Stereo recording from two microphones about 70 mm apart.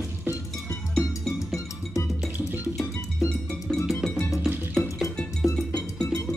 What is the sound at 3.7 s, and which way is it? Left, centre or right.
Music, centre.